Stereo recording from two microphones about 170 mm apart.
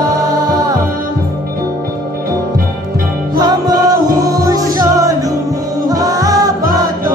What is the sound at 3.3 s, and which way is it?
Music, 25° right (ahead or behind).